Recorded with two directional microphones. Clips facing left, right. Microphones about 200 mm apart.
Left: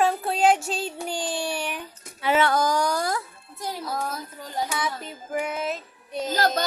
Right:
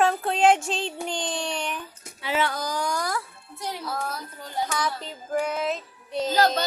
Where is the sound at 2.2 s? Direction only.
50° left (ahead or behind).